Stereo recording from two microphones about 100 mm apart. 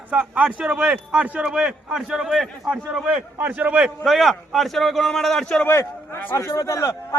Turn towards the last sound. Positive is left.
turn(degrees=35)  # may be behind; listen again after turning